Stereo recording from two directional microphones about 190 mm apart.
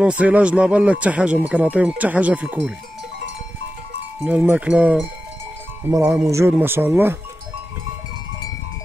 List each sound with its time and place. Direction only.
0.0 s speech: 5° right (ahead or behind)
4.2 s speech: 10° right (ahead or behind)